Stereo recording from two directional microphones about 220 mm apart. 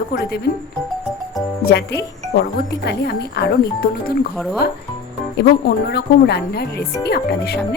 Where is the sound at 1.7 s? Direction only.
50° left (ahead or behind).